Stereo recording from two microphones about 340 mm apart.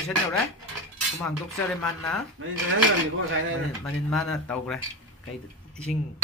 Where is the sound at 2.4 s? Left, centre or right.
Right.